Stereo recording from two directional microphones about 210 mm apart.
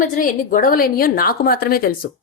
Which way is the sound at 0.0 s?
40° left (ahead or behind).